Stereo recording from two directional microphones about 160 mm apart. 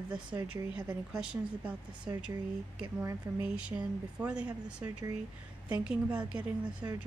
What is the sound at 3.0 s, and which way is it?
Speech, 15° right (ahead or behind).